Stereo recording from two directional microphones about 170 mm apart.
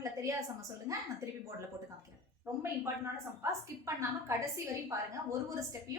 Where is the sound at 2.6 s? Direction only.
15° right (ahead or behind).